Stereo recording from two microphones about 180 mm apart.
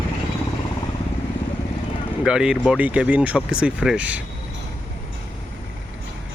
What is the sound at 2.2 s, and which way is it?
Speech, 5° right (ahead or behind).